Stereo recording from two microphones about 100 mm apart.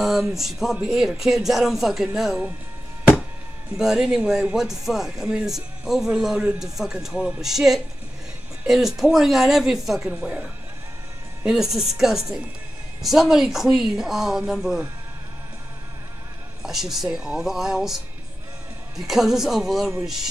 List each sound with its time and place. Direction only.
0.0 s speech: 5° right (ahead or behind)
3.7 s speech: 5° right (ahead or behind)
16.6 s speech: 5° right (ahead or behind)